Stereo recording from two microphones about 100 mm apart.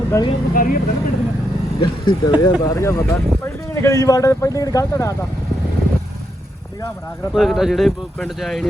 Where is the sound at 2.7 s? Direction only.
25° left (ahead or behind).